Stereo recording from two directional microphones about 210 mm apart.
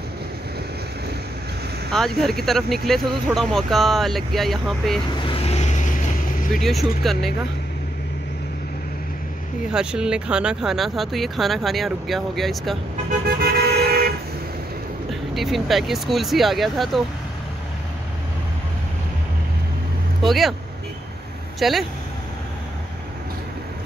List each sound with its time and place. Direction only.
1.9 s speech: centre (ahead or behind)
5.2 s vehicle: 25° left (ahead or behind)
6.5 s speech: centre (ahead or behind)
9.7 s speech: 5° right (ahead or behind)
13.4 s vehicle: 50° right (ahead or behind)
15.0 s speech: centre (ahead or behind)
20.2 s speech: centre (ahead or behind)
21.5 s speech: centre (ahead or behind)